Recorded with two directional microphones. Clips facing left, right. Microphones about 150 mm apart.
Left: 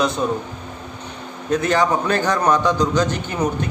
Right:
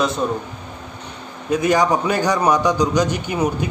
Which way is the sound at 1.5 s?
10° right (ahead or behind).